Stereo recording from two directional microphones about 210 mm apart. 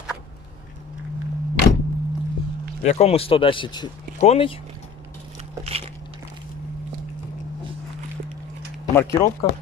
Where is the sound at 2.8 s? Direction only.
30° left (ahead or behind).